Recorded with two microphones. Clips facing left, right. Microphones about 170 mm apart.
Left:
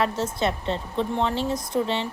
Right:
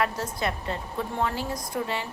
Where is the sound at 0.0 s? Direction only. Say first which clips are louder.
Left 4 dB; 25° left (ahead or behind).